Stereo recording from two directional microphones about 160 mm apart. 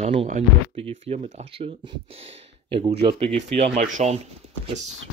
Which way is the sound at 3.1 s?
40° right (ahead or behind).